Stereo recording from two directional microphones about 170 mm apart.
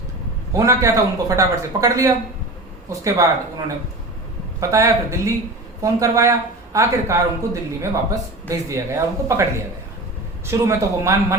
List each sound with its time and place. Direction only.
0.5 s speech: 20° right (ahead or behind)
4.7 s speech: 20° right (ahead or behind)